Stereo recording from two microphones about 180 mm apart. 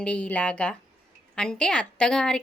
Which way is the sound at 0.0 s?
5° left (ahead or behind).